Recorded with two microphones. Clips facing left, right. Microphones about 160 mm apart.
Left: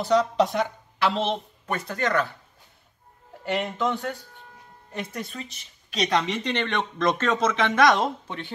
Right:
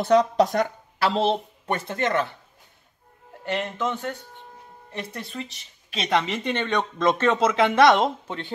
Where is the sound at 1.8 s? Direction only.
25° right (ahead or behind).